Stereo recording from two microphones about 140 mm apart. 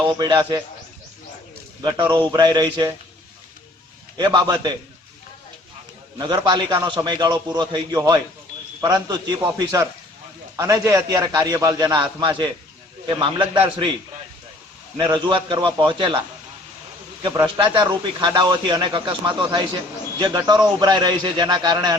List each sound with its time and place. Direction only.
0.1 s a man's voice: 30° right (ahead or behind)
1.8 s a man's voice: 30° right (ahead or behind)
4.2 s a man's voice: 30° right (ahead or behind)
6.1 s a man's voice: 30° right (ahead or behind)
9.4 s a man's voice: 15° right (ahead or behind); by 13.9 s 35° right (ahead or behind)
14.9 s a man's voice: 35° right (ahead or behind)
17.2 s a man's voice: 35° right (ahead or behind)